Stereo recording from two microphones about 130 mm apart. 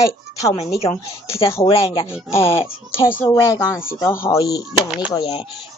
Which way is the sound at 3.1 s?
20° left (ahead or behind).